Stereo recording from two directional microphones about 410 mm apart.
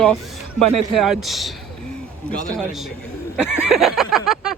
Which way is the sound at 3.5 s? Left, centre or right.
Centre.